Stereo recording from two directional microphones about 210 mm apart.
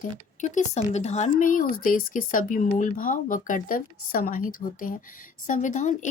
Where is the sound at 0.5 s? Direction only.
30° left (ahead or behind).